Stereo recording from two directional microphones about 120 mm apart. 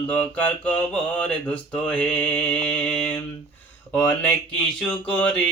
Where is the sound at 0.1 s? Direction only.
15° left (ahead or behind).